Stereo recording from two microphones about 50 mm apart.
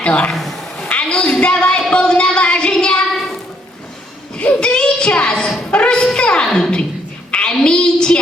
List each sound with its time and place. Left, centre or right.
0.0 s a man's voice: left
0.3 s a sound: centre
0.9 s a sound: left
1.9 s speech: centre
2.7 s child singing: left
4.6 s child singing: centre
5.7 s music: centre
6.1 s a woman's voice: centre
7.3 s a sound: centre